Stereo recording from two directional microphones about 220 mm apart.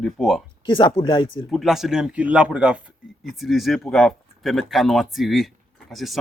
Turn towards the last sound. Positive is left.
turn(degrees=0)  # may be behind; listen again after turning